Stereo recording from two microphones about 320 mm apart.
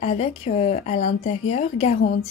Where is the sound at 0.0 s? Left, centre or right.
Centre.